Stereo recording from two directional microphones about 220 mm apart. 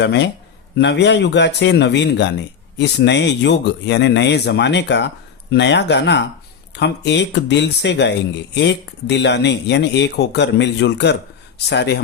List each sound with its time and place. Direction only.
0.0 s speech: 50° left (ahead or behind)